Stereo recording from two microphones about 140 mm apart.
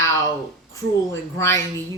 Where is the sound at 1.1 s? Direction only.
20° left (ahead or behind).